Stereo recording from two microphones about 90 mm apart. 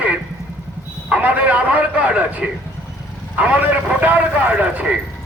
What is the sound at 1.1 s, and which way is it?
A man's voice, 15° right (ahead or behind).